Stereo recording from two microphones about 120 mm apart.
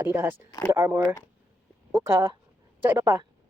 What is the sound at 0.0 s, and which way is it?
Speech, 20° right (ahead or behind).